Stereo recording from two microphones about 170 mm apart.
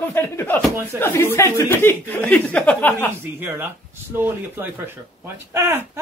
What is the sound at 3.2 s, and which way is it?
Speech, 10° right (ahead or behind).